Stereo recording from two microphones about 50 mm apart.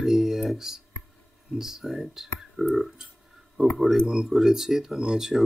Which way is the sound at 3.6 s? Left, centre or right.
Centre.